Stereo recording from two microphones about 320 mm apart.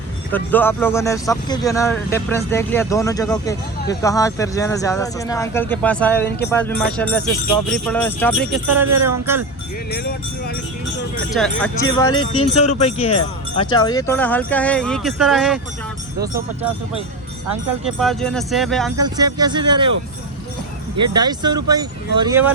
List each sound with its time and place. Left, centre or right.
0.3 s speech: centre
9.9 s speech: left
11.3 s speech: centre
12.3 s speech: centre
17.8 s speech: centre
18.9 s speech: centre
20.9 s speech: centre